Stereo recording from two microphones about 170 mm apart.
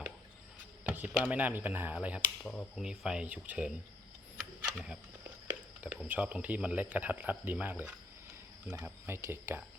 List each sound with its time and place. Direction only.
0.9 s speech: 10° right (ahead or behind)
2.5 s speech: 5° left (ahead or behind)
6.1 s speech: 5° right (ahead or behind)